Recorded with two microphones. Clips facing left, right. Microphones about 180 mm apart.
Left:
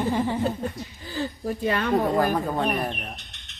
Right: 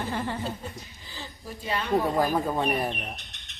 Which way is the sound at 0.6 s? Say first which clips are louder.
Left 9 dB; 55° left (ahead or behind).